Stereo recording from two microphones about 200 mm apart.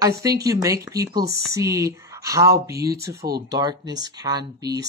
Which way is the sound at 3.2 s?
50° right (ahead or behind).